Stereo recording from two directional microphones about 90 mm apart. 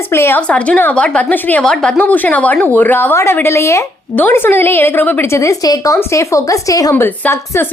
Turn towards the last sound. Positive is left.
turn(degrees=20)  # may be behind; listen again after turning